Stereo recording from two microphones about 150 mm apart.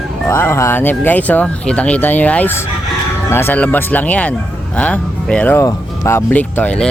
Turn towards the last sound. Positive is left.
turn(degrees=10)  # may be behind; listen again after turning